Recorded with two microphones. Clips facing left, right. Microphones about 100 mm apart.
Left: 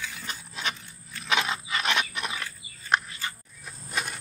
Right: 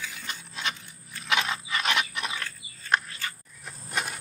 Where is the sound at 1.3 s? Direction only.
20° left (ahead or behind).